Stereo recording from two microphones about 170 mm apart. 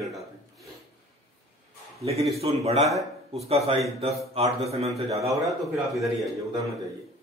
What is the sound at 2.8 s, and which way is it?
Speech, centre (ahead or behind).